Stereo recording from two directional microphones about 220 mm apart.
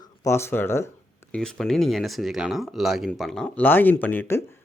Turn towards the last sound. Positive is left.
turn(degrees=10)  # may be behind; listen again after turning